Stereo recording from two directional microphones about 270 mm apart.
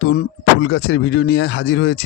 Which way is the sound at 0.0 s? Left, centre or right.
Left.